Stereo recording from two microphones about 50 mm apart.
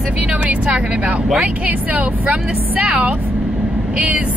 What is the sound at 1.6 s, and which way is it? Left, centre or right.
Speech, right.